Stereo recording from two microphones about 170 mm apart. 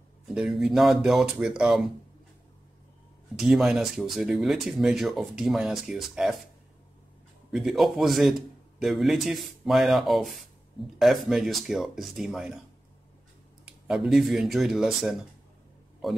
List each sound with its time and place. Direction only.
0.3 s speech: 5° right (ahead or behind)
3.3 s speech: centre (ahead or behind)
7.5 s speech: centre (ahead or behind)
13.7 s speech: centre (ahead or behind)